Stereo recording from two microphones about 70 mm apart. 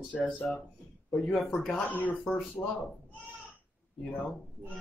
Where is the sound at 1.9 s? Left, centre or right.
Left.